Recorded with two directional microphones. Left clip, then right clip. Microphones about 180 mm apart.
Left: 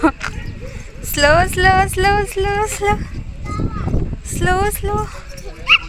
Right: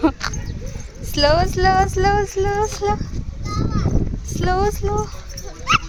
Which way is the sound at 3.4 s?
30° right (ahead or behind).